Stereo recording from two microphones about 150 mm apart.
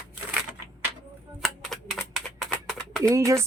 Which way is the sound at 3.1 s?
20° right (ahead or behind).